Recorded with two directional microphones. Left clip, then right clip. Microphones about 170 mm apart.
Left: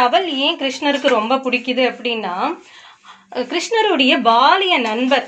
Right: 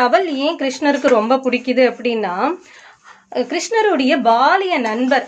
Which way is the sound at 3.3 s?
50° right (ahead or behind).